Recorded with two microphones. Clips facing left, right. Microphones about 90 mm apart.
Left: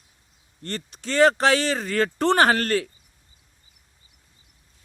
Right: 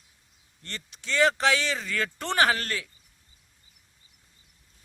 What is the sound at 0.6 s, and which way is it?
Speech, 45° left (ahead or behind).